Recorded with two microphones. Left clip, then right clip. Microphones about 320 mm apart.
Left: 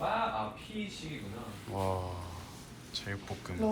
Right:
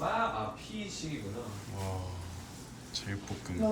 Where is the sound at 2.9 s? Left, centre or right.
Centre.